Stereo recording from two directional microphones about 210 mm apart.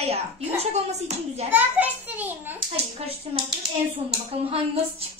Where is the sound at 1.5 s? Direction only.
10° right (ahead or behind).